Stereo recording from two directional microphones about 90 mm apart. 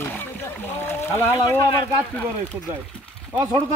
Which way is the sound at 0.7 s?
25° left (ahead or behind).